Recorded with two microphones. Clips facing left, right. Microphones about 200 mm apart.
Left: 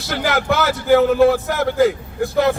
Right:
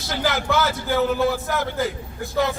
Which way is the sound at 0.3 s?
60° left (ahead or behind).